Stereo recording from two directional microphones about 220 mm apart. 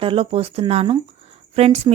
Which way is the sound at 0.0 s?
25° right (ahead or behind).